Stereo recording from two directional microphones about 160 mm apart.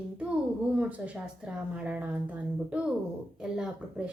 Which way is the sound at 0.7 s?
5° right (ahead or behind).